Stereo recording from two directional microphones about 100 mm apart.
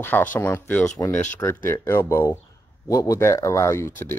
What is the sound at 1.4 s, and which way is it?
Speech, 25° left (ahead or behind).